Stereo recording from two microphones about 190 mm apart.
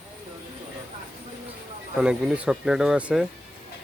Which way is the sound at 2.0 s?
5° right (ahead or behind).